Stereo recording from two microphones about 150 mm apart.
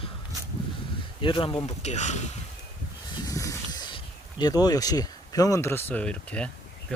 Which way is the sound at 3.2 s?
20° left (ahead or behind).